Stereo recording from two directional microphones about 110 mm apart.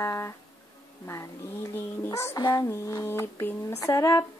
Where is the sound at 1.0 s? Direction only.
30° left (ahead or behind).